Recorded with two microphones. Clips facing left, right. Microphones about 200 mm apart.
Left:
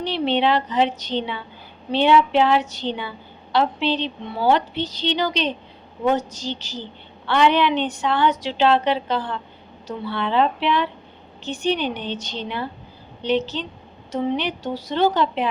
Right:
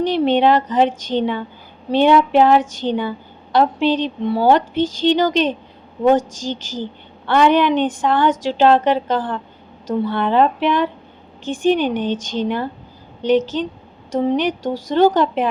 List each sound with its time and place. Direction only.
0.0 s a woman's voice: 45° right (ahead or behind)